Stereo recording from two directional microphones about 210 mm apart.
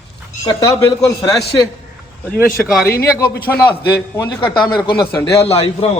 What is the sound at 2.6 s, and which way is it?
Speech, centre (ahead or behind).